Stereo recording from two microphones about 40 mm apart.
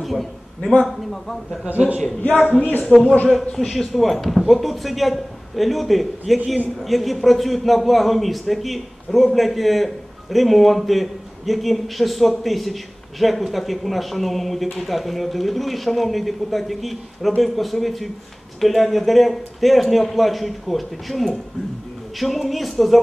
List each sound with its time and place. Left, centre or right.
0.0 s a sound: centre
1.7 s a man's voice: right
2.9 s a man's voice: centre